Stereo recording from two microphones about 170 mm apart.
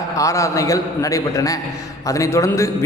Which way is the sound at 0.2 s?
20° left (ahead or behind).